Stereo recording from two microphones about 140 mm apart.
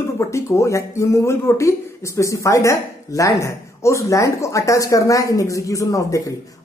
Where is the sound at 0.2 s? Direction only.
20° left (ahead or behind).